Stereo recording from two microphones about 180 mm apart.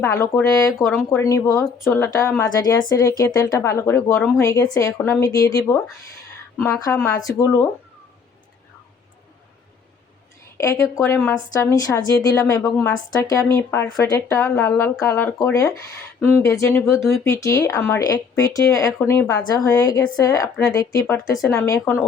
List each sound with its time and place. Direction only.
0.0 s a woman's voice: 15° left (ahead or behind)
10.6 s a woman's voice: 15° left (ahead or behind)